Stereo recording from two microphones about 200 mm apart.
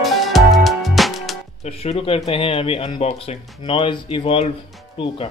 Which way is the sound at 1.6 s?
30° left (ahead or behind).